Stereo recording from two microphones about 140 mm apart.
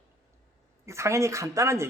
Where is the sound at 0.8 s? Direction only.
20° right (ahead or behind).